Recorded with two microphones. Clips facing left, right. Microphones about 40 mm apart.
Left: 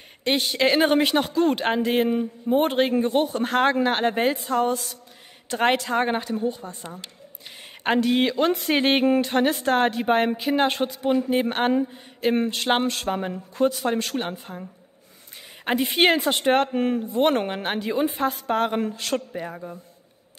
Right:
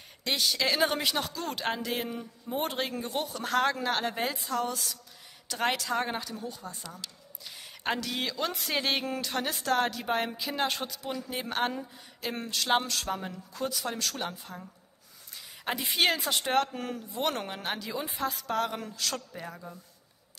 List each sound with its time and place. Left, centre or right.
0.2 s a woman's voice: left